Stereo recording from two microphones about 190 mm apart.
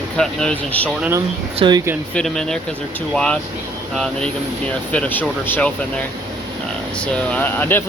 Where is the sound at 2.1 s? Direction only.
5° left (ahead or behind).